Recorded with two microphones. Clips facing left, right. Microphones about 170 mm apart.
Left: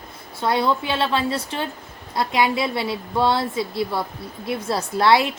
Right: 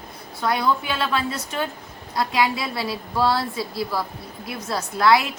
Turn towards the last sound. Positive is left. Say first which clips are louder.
# left 1 dB
turn(degrees=30)  # may be behind; listen again after turning